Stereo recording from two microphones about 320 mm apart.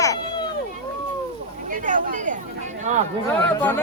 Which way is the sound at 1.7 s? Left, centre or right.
Right.